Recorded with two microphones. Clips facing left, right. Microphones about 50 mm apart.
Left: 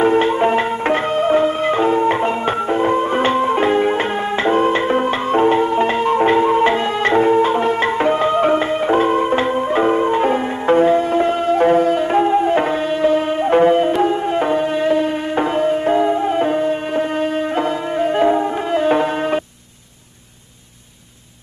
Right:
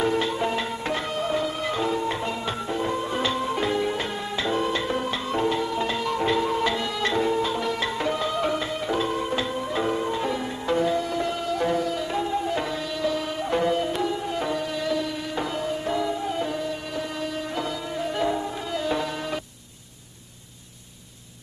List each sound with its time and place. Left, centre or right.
0.0 s music: left